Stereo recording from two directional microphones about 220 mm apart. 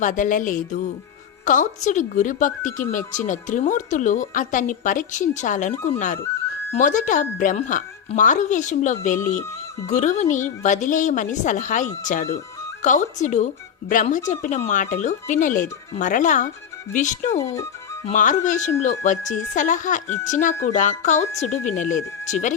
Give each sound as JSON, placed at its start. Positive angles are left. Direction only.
{"t": 0.0, "sound": "a woman's voice", "side_deg": 35}
{"t": 17.3, "sound": "speech", "side_deg": 10}
{"t": 18.0, "sound": "a woman's voice", "side_deg": 35}